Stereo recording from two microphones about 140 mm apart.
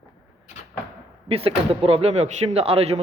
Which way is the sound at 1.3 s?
45° right (ahead or behind).